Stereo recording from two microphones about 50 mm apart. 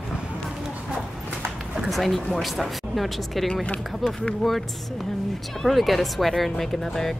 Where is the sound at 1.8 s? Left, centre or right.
Centre.